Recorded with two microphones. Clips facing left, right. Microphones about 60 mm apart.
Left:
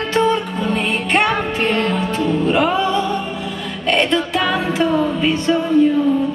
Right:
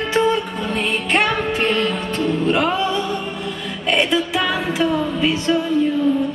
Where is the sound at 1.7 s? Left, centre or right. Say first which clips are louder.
Left 1 dB; left.